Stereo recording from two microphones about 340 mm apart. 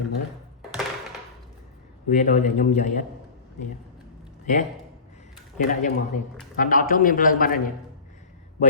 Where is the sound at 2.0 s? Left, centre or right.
Centre.